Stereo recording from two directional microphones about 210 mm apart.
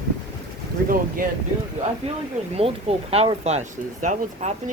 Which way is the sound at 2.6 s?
30° right (ahead or behind).